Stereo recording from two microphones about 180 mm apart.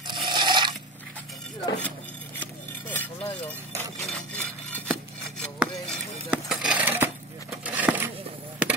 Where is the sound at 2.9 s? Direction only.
10° left (ahead or behind).